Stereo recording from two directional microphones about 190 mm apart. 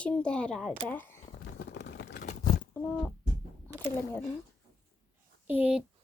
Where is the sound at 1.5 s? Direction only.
60° left (ahead or behind).